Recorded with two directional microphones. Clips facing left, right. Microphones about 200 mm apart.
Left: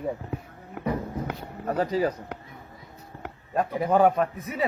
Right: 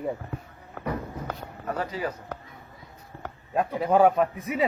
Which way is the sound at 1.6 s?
40° left (ahead or behind).